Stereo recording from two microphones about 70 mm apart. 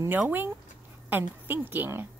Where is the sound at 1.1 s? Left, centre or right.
Right.